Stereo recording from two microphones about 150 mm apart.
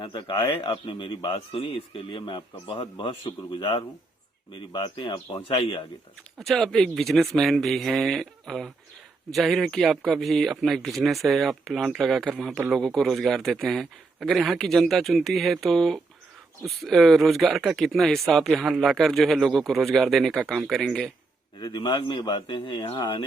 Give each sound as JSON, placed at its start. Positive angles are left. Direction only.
{"t": 0.0, "sound": "speech", "side_deg": 30}
{"t": 6.4, "sound": "speech", "side_deg": 0}
{"t": 21.6, "sound": "speech", "side_deg": 30}